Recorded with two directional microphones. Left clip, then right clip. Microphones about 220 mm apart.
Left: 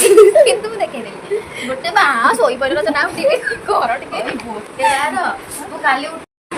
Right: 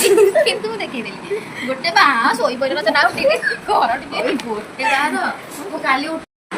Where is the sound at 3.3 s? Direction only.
25° left (ahead or behind).